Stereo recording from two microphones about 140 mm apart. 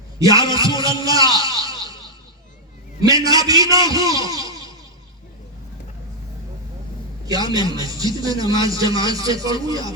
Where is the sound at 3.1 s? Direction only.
25° right (ahead or behind).